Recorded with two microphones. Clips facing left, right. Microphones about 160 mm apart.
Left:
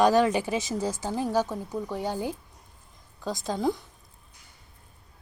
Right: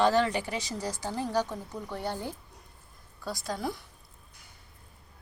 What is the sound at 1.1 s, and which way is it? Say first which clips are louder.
Speech: left 3 dB; 15° left (ahead or behind).